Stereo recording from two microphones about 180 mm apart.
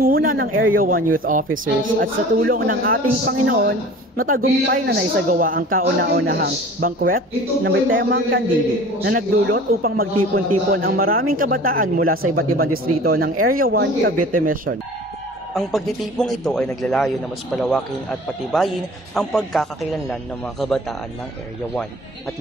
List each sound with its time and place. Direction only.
0.0 s speech: 55° right (ahead or behind)
1.5 s speech: 90° right
2.0 s speech: 55° right (ahead or behind)
15.5 s a man's voice: centre (ahead or behind)
19.1 s a man's voice: centre (ahead or behind)